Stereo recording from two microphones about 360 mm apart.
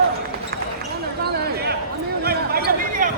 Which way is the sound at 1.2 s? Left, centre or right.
Right.